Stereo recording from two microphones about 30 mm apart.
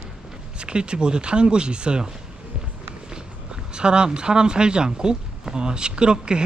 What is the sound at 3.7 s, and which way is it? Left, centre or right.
Speech, right.